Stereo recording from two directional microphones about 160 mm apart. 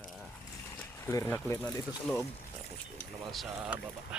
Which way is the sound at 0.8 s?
15° left (ahead or behind).